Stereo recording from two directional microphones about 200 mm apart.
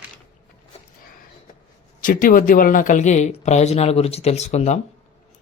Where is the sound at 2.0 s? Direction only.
45° left (ahead or behind).